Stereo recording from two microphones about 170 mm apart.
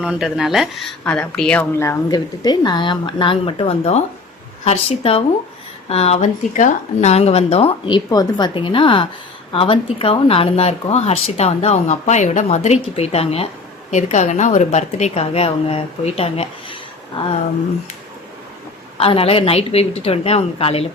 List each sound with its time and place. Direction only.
0.0 s speech: 5° right (ahead or behind); by 16.7 s 35° left (ahead or behind)
18.9 s speech: 35° left (ahead or behind)